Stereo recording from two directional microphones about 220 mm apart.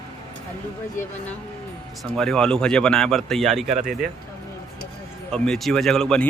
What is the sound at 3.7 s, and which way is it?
Speech, 35° right (ahead or behind).